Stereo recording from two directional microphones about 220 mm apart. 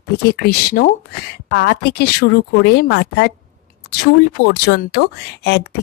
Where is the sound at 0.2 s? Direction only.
45° left (ahead or behind).